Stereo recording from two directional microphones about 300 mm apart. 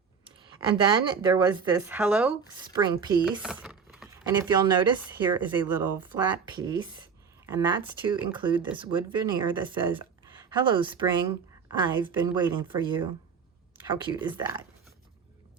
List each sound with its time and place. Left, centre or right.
0.3 s speech: centre
3.4 s speech: centre